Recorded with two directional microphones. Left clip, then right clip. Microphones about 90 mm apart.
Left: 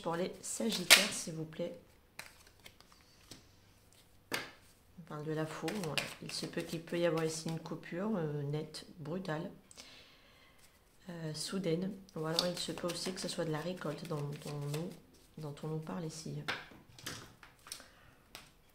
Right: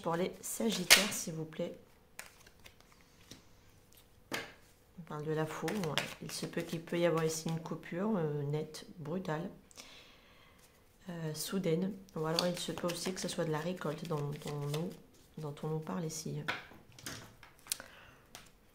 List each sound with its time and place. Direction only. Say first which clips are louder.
0.0 s speech: right 2 dB; 25° right (ahead or behind)
5.0 s speech: right 3 dB; 30° right (ahead or behind)
5.7 s speech: right 2 dB; 15° right (ahead or behind)
15.3 s speech: right 3 dB; 30° right (ahead or behind)